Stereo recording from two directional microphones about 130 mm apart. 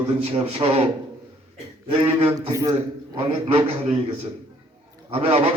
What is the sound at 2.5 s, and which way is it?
Speech, 30° right (ahead or behind).